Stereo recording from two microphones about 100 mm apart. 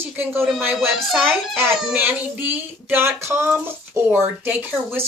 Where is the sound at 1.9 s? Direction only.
15° right (ahead or behind).